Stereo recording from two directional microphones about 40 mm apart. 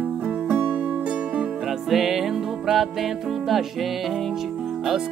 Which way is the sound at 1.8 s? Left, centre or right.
Centre.